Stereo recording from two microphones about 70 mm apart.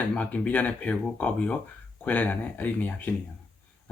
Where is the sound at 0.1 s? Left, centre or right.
Centre.